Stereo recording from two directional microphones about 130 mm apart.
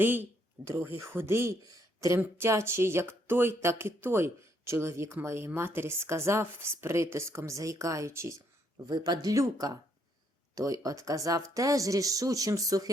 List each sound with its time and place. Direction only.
0.0 s speech: 15° right (ahead or behind)